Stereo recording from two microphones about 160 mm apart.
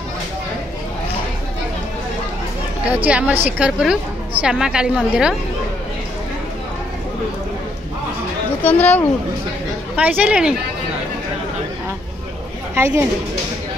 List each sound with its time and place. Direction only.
3.1 s a woman's voice: 5° right (ahead or behind)
8.6 s speech: 10° left (ahead or behind)
9.9 s speech: 10° right (ahead or behind)
12.7 s speech: 20° right (ahead or behind)